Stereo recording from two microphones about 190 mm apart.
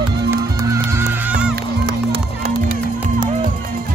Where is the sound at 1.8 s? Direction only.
60° right (ahead or behind).